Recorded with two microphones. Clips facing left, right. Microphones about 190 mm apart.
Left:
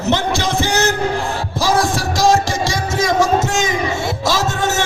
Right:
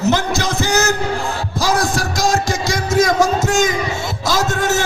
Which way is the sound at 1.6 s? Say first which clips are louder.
Left 1 dB; 25° left (ahead or behind).